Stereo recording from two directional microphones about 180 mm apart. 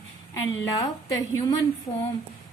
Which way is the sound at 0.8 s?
15° left (ahead or behind).